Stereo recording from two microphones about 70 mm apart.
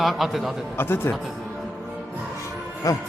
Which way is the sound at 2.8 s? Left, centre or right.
Left.